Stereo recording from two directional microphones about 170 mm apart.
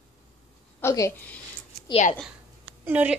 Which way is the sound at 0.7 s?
15° left (ahead or behind).